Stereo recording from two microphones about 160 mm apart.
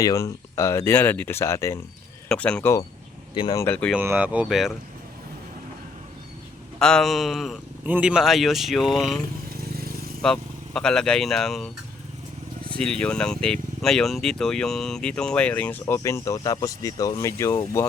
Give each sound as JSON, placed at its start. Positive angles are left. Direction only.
{"t": 0.0, "sound": "speech", "side_deg": 20}
{"t": 2.3, "sound": "speech", "side_deg": 5}
{"t": 3.5, "sound": "speech", "side_deg": 20}
{"t": 3.9, "sound": "speech", "side_deg": -10}
{"t": 6.7, "sound": "speech", "side_deg": 5}
{"t": 10.2, "sound": "speech", "side_deg": 5}
{"t": 12.7, "sound": "speech", "side_deg": 5}